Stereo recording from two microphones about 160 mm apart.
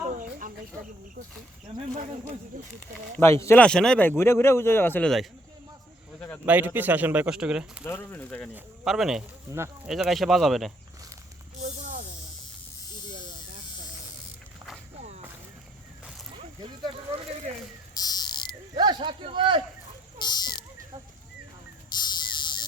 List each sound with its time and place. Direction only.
0.1 s a sound: 55° right (ahead or behind)
3.2 s a man's voice: 15° left (ahead or behind)
3.6 s a man's voice: 5° left (ahead or behind)
6.4 s speech: 10° right (ahead or behind)
7.9 s a man's voice: 10° left (ahead or behind)
8.5 s speech: centre (ahead or behind)
11.6 s spray: 50° right (ahead or behind)
17.9 s buzzer: 25° left (ahead or behind)
18.8 s a sound: 30° right (ahead or behind)
20.2 s a sound: 25° left (ahead or behind)
21.8 s cricket: 25° left (ahead or behind)